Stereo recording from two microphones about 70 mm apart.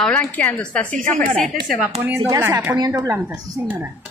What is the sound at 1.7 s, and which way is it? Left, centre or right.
Speech, centre.